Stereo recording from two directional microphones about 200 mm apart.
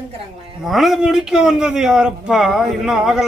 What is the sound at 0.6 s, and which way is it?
Speech, centre (ahead or behind).